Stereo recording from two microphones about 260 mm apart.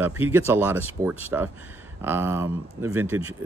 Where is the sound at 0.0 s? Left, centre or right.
Centre.